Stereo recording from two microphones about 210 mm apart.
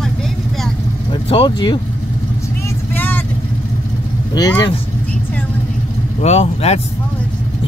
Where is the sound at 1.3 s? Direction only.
20° left (ahead or behind).